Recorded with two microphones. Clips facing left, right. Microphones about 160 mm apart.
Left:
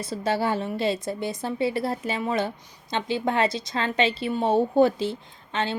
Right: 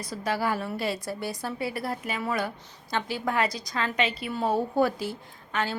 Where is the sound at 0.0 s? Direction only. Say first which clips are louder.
Left 3 dB; 25° left (ahead or behind).